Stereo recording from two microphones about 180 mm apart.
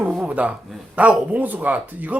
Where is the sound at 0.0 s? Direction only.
5° right (ahead or behind).